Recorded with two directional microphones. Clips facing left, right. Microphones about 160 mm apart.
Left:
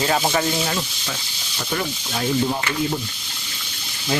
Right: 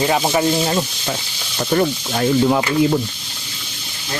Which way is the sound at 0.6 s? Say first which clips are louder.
Right 6 dB; 35° right (ahead or behind).